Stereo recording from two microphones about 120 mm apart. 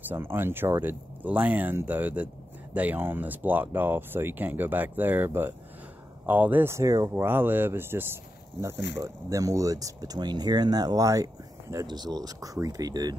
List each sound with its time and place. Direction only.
0.1 s speech: 20° right (ahead or behind)